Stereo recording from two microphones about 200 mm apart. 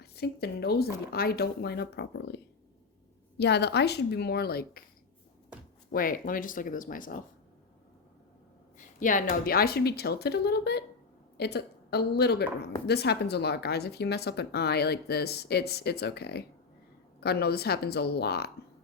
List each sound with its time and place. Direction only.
0.0 s speech: 55° left (ahead or behind)
5.9 s speech: 45° left (ahead or behind)
9.0 s a woman's voice: 40° left (ahead or behind)